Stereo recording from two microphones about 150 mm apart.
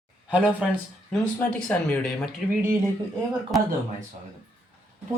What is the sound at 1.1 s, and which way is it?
Speech, 5° left (ahead or behind).